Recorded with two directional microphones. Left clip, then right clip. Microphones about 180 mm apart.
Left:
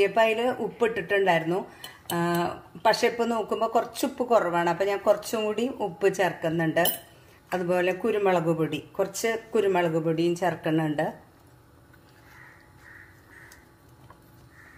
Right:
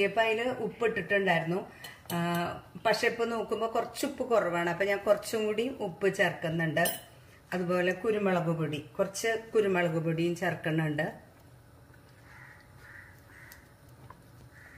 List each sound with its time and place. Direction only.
0.0 s a man's voice: 45° left (ahead or behind)